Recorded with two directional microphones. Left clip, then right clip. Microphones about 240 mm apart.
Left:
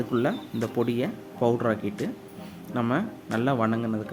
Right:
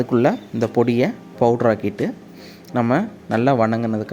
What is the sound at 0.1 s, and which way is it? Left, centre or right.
Speech, right.